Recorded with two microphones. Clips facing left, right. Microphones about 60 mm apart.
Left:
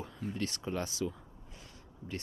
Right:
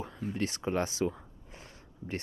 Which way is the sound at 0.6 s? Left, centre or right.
Right.